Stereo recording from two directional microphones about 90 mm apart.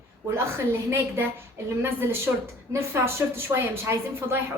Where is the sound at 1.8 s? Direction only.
30° right (ahead or behind).